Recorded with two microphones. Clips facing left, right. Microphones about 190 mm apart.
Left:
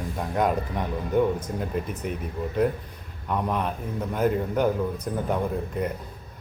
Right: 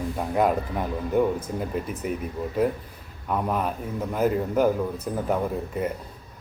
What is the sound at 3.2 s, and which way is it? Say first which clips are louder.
A man's voice: right 1 dB; 5° right (ahead or behind).